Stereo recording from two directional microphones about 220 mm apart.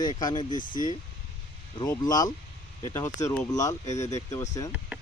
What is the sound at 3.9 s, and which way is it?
Speech, 30° left (ahead or behind).